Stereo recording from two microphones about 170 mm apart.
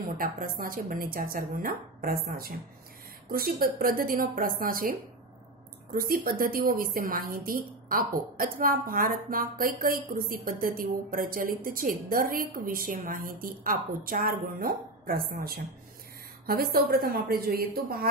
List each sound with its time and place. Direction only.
0.0 s a woman's voice: 55° right (ahead or behind)
3.3 s a woman's voice: 60° right (ahead or behind)